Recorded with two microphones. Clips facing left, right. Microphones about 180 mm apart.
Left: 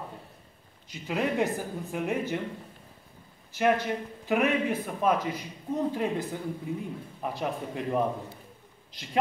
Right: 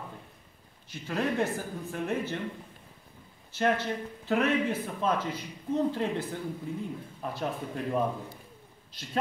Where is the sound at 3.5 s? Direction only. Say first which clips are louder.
Left 2 dB; 15° left (ahead or behind).